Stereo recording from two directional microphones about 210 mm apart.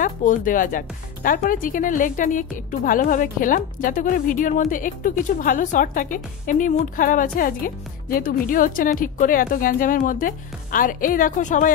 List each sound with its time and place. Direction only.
0.0 s speech: 40° left (ahead or behind)